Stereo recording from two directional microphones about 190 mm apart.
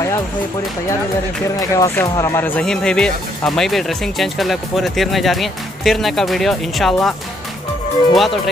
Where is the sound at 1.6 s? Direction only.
15° left (ahead or behind).